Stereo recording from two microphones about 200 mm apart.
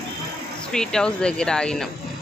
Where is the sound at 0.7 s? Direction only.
5° left (ahead or behind).